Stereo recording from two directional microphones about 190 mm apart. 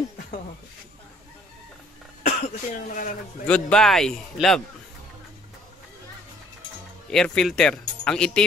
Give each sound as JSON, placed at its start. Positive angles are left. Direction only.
{"t": 2.2, "sound": "speech", "side_deg": 45}
{"t": 3.4, "sound": "speech", "side_deg": 5}
{"t": 7.1, "sound": "speech", "side_deg": 5}